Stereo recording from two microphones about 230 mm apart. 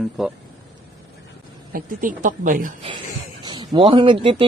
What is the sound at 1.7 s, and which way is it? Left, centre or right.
A woman's voice, right.